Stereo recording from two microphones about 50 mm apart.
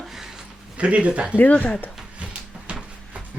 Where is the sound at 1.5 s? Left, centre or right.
Left.